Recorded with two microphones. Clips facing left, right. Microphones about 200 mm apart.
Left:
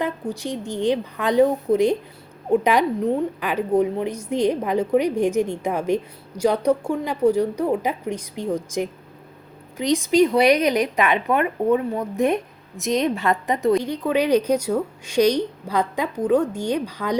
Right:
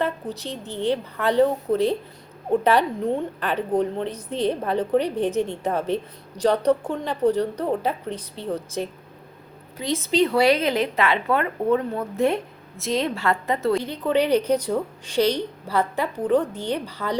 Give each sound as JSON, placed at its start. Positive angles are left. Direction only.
{"t": 0.0, "sound": "a woman's voice", "side_deg": 15}
{"t": 3.0, "sound": "a woman's voice", "side_deg": 0}